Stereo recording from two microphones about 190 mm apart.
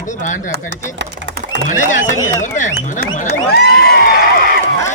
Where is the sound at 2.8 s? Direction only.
40° left (ahead or behind).